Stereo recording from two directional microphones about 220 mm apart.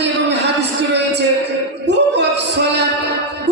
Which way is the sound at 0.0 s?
50° right (ahead or behind).